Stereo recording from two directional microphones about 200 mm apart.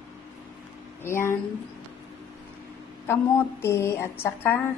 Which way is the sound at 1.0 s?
10° left (ahead or behind).